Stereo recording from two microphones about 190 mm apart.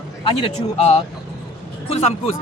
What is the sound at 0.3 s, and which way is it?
Speech, 30° left (ahead or behind).